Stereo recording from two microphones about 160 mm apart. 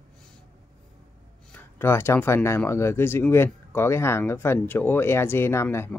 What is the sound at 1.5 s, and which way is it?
Speech, 15° left (ahead or behind).